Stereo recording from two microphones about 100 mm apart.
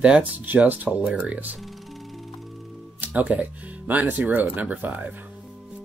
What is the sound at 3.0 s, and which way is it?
Speech, 15° right (ahead or behind).